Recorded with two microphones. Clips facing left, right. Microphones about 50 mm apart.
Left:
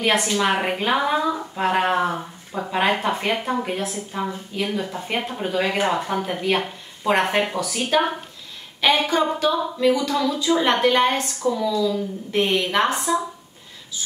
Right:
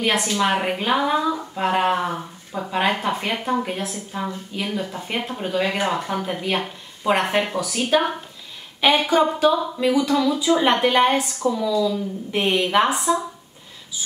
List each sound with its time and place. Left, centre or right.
0.0 s a woman's voice: centre